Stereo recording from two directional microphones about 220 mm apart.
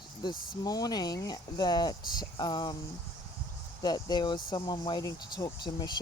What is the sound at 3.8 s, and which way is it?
Speech, 20° left (ahead or behind).